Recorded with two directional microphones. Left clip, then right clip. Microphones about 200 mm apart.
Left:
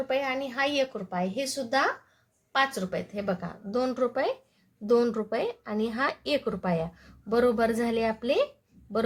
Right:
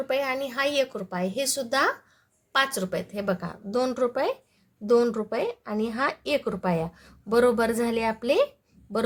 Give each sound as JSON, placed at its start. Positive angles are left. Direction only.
{"t": 0.1, "sound": "speech", "side_deg": -25}